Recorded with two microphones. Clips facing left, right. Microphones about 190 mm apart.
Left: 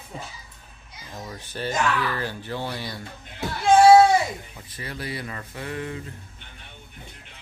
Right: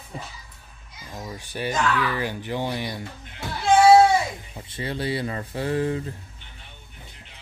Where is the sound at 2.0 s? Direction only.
15° right (ahead or behind).